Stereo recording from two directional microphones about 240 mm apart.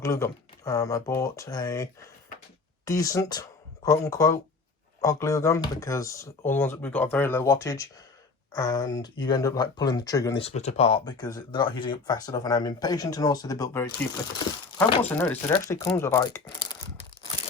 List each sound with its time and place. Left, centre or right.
0.0 s speech: centre
15.1 s speech: centre